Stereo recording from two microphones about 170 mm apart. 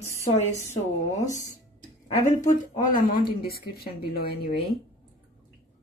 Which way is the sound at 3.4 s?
60° left (ahead or behind).